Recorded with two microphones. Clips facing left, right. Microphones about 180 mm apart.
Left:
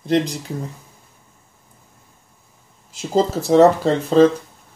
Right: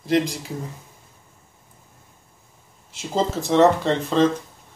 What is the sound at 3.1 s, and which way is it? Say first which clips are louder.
Speech: left 5 dB; 35° left (ahead or behind).